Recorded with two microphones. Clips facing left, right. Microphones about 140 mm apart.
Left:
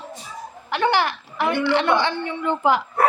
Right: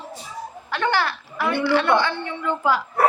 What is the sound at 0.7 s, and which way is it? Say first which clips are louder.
A woman's voice: left 2 dB; 15° left (ahead or behind).